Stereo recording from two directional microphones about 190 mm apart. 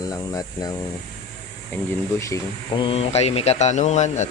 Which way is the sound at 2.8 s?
30° left (ahead or behind).